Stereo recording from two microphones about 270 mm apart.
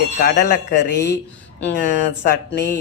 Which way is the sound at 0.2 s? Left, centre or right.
Left.